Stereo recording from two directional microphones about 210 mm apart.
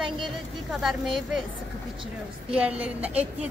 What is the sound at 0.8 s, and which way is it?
Speech, centre (ahead or behind).